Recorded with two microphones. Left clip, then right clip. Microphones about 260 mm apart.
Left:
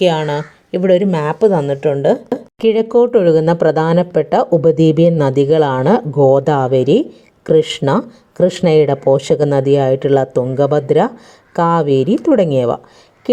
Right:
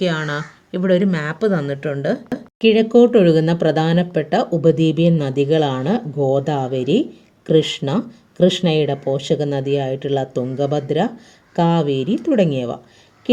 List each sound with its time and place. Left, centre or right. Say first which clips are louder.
0.0 s speech: left 7 dB; centre